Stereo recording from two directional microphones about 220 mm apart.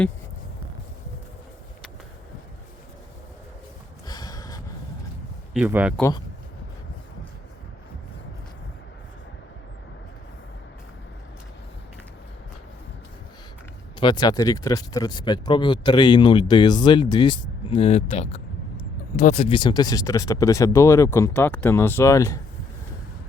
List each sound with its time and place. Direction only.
4.0 s a sound: 20° left (ahead or behind)
5.5 s speech: 5° right (ahead or behind)
6.0 s speech: 15° left (ahead or behind)
14.0 s speech: 20° left (ahead or behind)